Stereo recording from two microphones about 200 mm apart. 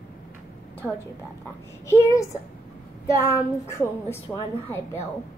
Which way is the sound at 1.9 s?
15° left (ahead or behind).